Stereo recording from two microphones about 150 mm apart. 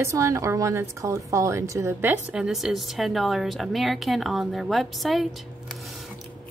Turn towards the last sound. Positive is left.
turn(degrees=0)  # may be behind; listen again after turning